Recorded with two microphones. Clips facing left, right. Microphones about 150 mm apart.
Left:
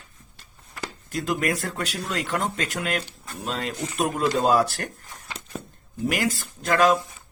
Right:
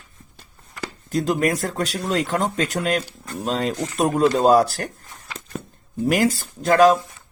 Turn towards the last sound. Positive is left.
turn(degrees=-40)  # may be behind; listen again after turning